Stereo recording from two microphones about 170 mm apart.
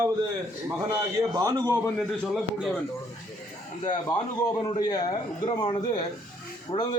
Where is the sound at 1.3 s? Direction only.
20° right (ahead or behind).